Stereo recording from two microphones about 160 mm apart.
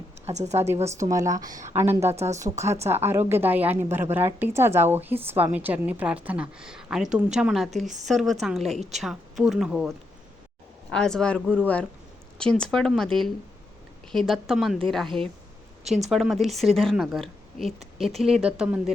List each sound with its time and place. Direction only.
0.3 s a woman's voice: 45° right (ahead or behind)
0.9 s a woman's voice: 20° right (ahead or behind); by 9.9 s 5° right (ahead or behind)
10.9 s a woman's voice: 5° left (ahead or behind)